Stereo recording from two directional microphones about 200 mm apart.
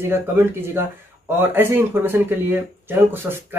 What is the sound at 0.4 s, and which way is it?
Speech, 10° right (ahead or behind).